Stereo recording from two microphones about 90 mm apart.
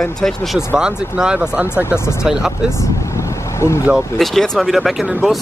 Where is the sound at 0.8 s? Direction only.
10° right (ahead or behind).